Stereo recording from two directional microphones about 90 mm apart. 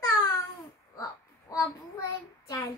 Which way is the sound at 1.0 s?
40° left (ahead or behind).